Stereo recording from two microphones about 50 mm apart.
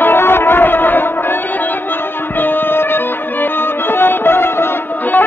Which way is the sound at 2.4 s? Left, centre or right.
Left.